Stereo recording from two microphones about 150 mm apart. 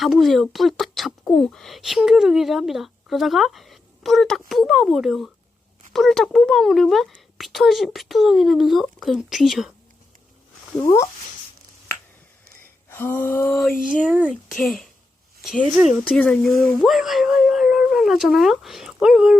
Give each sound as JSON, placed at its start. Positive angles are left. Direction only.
{"t": 0.0, "sound": "speech", "side_deg": 0}
{"t": 12.9, "sound": "a sound", "side_deg": 15}
{"t": 14.5, "sound": "speech", "side_deg": 0}